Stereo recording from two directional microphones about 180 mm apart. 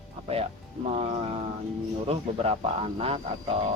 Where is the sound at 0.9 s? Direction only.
35° right (ahead or behind).